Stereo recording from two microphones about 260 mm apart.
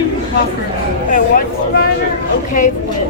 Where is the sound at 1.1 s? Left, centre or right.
Left.